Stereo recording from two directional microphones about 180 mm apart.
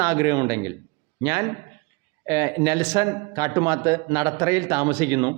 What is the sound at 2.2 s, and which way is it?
A man's voice, 15° right (ahead or behind).